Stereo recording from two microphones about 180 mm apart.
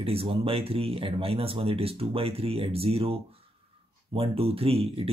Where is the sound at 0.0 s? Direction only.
30° right (ahead or behind).